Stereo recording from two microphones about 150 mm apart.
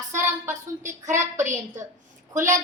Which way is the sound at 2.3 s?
55° right (ahead or behind).